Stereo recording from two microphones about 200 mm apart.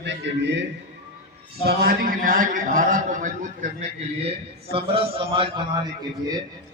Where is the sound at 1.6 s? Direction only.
50° right (ahead or behind).